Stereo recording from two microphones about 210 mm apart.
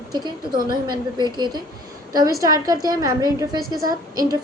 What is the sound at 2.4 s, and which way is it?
Speech, 15° right (ahead or behind).